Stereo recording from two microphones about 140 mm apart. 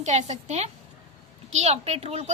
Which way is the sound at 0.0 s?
55° right (ahead or behind).